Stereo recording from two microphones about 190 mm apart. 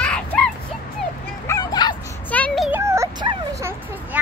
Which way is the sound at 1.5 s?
20° left (ahead or behind).